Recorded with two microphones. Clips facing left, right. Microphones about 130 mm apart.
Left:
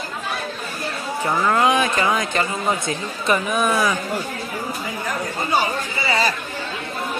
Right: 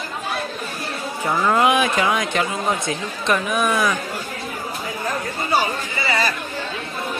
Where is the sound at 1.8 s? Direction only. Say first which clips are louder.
Even; centre (ahead or behind).